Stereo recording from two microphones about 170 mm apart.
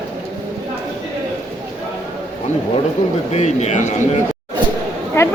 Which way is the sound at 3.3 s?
40° left (ahead or behind).